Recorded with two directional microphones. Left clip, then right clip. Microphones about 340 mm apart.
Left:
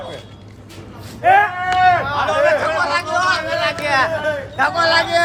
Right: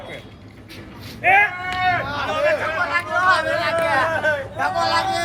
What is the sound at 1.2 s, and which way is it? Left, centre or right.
Speech, centre.